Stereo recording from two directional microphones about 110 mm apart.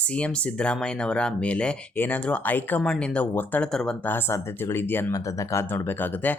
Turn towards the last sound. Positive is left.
turn(degrees=20)  # may be behind; listen again after turning